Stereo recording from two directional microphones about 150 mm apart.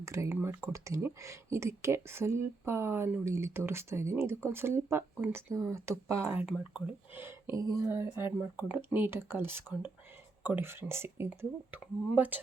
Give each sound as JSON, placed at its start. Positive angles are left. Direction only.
{"t": 0.0, "sound": "speech", "side_deg": -20}